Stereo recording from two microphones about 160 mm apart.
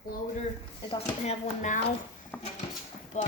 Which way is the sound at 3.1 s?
45° left (ahead or behind).